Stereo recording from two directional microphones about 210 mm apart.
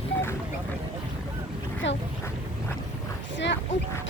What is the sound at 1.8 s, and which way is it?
Speech, 60° left (ahead or behind).